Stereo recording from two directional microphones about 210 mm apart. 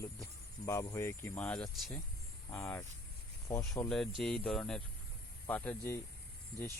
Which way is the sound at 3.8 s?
Centre (ahead or behind).